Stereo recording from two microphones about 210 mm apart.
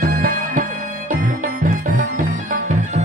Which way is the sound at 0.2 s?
40° right (ahead or behind).